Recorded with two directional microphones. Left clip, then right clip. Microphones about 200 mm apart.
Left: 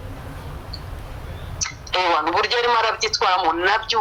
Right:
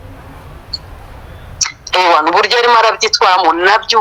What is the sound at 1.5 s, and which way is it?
Speech, 30° right (ahead or behind).